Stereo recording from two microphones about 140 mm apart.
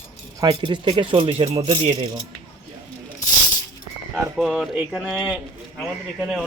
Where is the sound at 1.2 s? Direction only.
50° right (ahead or behind).